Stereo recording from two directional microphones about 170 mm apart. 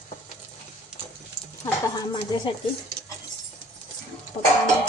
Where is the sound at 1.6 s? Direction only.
20° left (ahead or behind).